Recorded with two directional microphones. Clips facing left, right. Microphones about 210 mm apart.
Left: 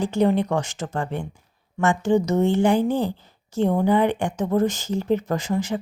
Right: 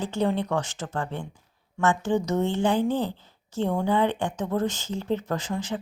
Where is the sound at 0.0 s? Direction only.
15° left (ahead or behind).